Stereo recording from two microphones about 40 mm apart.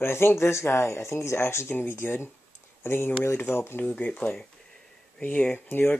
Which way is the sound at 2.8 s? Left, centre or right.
Left.